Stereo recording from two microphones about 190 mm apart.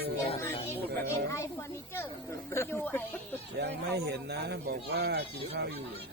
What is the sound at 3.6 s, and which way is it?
Speech, 60° right (ahead or behind).